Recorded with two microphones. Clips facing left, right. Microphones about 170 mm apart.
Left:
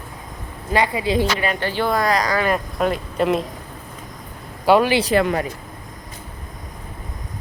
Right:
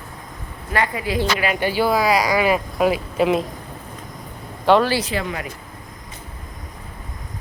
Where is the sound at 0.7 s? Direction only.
20° left (ahead or behind).